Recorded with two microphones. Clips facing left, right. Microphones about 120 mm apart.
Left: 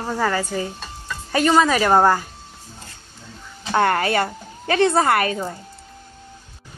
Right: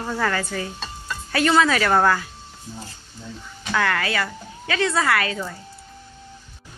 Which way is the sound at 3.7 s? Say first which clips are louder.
Left 5 dB; 35° left (ahead or behind).